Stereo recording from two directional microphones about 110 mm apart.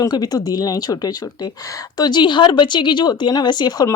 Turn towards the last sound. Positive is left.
turn(degrees=40)  # may be behind; listen again after turning